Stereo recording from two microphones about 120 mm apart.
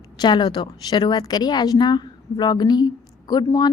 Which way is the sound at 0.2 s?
40° left (ahead or behind).